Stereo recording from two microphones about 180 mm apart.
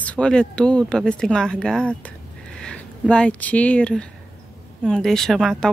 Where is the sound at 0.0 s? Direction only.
5° left (ahead or behind).